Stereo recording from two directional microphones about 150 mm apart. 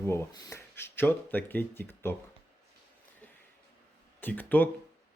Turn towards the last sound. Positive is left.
turn(degrees=10)  # may be behind; listen again after turning